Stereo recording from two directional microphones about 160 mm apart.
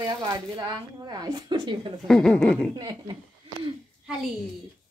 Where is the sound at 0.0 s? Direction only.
20° right (ahead or behind).